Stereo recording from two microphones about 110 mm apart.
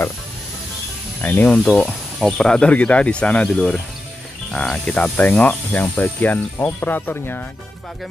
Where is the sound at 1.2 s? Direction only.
15° left (ahead or behind).